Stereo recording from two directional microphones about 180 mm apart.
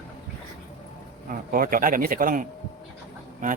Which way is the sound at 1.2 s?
50° right (ahead or behind).